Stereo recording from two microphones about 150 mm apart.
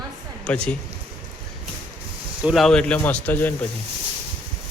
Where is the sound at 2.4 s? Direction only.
Centre (ahead or behind).